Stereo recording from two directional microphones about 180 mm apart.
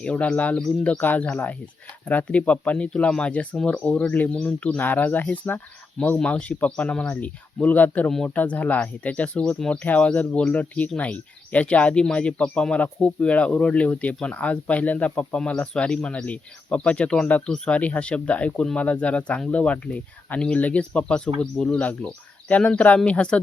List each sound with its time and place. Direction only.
0.0 s speech: 5° left (ahead or behind)